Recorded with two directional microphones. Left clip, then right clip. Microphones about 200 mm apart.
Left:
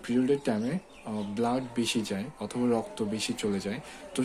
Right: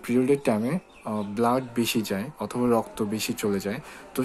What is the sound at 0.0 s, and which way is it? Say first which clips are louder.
Speech: right 5 dB; 20° right (ahead or behind).